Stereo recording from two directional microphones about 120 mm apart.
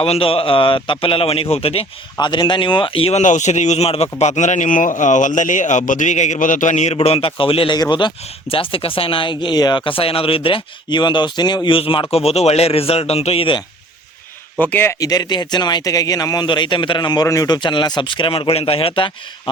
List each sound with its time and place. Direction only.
0.0 s speech: 50° left (ahead or behind)
2.1 s speech: 40° left (ahead or behind)
3.2 s a man's voice: 85° left
6.9 s speech: 55° left (ahead or behind)
7.8 s speech: 40° left (ahead or behind)
12.1 s a man's voice: 60° left (ahead or behind)
14.6 s speech: 15° left (ahead or behind)
14.9 s a man's voice: 30° left (ahead or behind); by 19.1 s 45° left (ahead or behind)